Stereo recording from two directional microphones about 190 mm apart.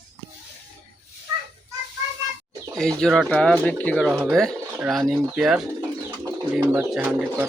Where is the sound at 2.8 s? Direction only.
5° left (ahead or behind).